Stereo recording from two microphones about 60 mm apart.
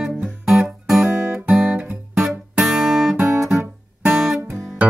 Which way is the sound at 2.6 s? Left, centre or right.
Centre.